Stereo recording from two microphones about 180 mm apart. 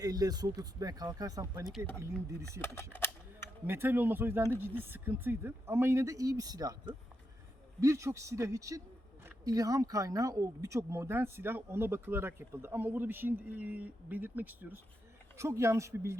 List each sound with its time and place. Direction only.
0.0 s speech: 20° right (ahead or behind)
2.6 s a sound: 15° left (ahead or behind)
3.7 s speech: 10° right (ahead or behind)